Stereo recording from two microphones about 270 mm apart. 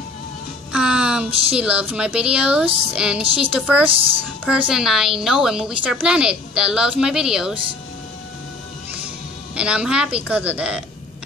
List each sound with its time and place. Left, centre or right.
0.7 s speech: centre
9.6 s speech: centre